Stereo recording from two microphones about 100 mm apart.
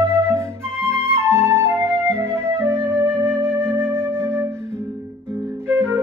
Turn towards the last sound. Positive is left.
turn(degrees=-25)  # may be behind; listen again after turning